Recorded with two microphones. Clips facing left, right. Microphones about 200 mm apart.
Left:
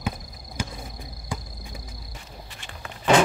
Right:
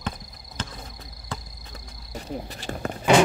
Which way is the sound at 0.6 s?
10° left (ahead or behind).